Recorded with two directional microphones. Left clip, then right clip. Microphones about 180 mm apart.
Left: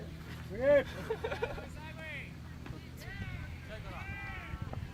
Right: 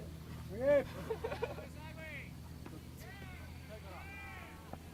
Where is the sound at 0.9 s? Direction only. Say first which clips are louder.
Left 3 dB; 45° left (ahead or behind).